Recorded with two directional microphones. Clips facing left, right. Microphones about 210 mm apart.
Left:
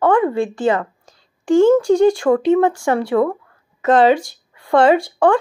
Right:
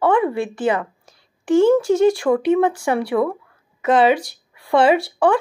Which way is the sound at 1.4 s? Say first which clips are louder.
Left 2 dB; 20° right (ahead or behind).